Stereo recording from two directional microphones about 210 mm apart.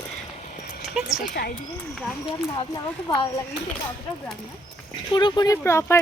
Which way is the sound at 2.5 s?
20° left (ahead or behind).